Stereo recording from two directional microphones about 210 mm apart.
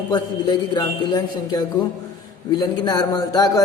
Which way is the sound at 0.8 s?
20° left (ahead or behind).